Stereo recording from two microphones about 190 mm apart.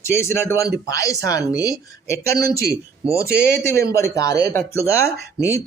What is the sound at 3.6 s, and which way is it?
Speech, 15° left (ahead or behind).